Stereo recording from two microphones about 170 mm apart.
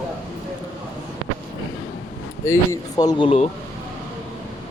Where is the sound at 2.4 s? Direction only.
15° left (ahead or behind).